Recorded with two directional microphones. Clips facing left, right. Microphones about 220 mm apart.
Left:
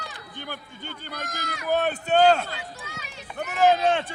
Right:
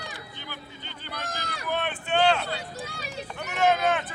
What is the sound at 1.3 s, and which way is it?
Run, 30° right (ahead or behind).